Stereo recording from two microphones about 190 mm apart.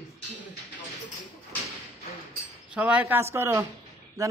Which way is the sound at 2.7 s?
5° right (ahead or behind).